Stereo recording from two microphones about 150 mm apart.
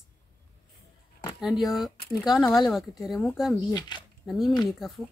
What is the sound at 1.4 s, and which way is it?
Speech, centre (ahead or behind).